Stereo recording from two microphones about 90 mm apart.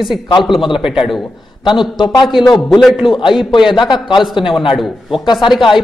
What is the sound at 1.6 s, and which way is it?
Speech, 60° left (ahead or behind).